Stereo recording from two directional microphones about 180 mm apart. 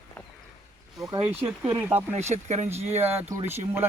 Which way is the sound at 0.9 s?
20° right (ahead or behind).